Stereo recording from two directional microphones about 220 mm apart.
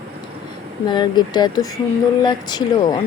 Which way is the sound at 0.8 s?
20° left (ahead or behind).